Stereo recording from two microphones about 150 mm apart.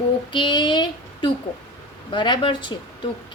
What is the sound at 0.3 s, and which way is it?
A woman's voice, 30° left (ahead or behind).